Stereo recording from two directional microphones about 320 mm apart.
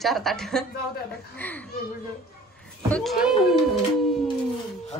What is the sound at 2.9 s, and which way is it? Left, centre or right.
Speech, centre.